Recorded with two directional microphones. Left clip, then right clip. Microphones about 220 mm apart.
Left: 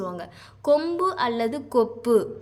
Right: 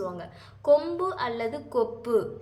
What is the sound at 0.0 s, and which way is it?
A woman's voice, 40° left (ahead or behind).